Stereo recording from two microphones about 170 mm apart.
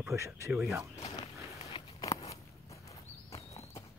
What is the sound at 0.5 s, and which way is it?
Speech, centre (ahead or behind).